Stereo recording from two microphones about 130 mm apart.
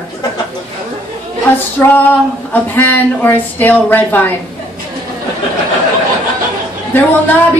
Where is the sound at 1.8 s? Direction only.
15° left (ahead or behind).